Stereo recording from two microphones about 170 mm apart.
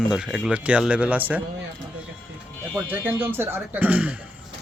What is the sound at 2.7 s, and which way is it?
Speech, 15° right (ahead or behind).